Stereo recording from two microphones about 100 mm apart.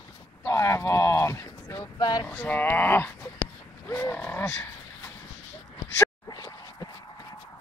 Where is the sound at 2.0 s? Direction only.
45° left (ahead or behind).